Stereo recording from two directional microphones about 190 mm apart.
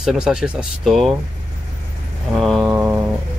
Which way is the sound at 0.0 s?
Centre (ahead or behind).